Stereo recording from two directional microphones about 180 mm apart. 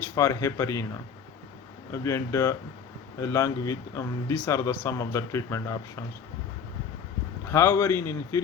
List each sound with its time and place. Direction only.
0.2 s speech: 15° left (ahead or behind)
1.9 s speech: 15° left (ahead or behind)
7.4 s speech: 15° left (ahead or behind)